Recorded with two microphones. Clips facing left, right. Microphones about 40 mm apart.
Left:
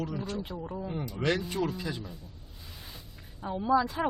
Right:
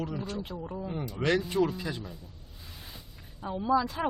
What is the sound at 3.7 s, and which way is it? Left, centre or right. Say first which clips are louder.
Speech: left 1 dB; centre.